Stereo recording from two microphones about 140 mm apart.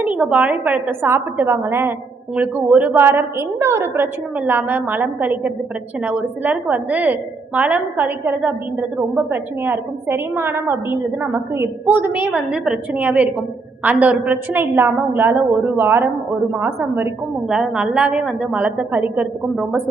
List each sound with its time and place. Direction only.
0.0 s a woman's voice: 10° right (ahead or behind)
17.5 s a woman's voice: 5° right (ahead or behind)